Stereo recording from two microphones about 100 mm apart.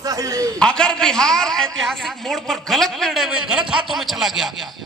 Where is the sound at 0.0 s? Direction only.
35° right (ahead or behind).